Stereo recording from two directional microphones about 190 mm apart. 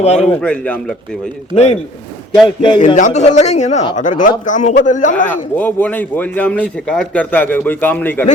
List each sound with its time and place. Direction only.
0.0 s a man's voice: 35° left (ahead or behind)
0.4 s speech: 5° left (ahead or behind)
1.5 s a man's voice: 35° left (ahead or behind)
2.6 s a man's voice: 25° left (ahead or behind)
2.8 s a man's voice: 40° left (ahead or behind)
5.3 s speech: 10° left (ahead or behind)